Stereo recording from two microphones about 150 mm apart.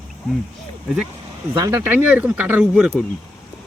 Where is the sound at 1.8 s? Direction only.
10° right (ahead or behind).